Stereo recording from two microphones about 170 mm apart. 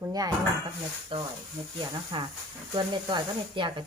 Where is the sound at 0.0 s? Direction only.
20° right (ahead or behind).